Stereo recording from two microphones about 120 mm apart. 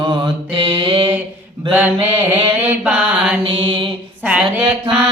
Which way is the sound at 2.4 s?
15° right (ahead or behind).